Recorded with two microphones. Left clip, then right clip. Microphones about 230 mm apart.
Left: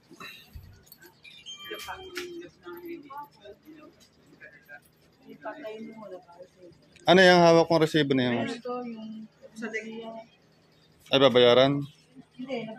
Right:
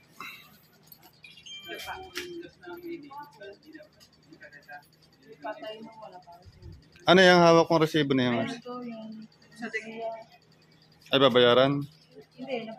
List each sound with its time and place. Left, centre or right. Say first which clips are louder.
0.2 s music: right 2 dB; centre
7.0 s speech: left 1 dB; centre
11.1 s speech: left 1 dB; centre